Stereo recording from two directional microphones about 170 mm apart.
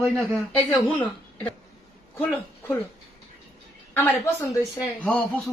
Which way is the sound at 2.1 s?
10° left (ahead or behind).